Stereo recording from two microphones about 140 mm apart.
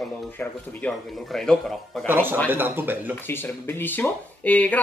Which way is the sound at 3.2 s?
15° left (ahead or behind).